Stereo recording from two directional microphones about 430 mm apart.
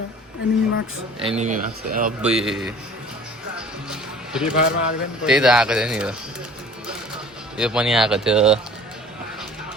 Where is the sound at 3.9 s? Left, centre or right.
Centre.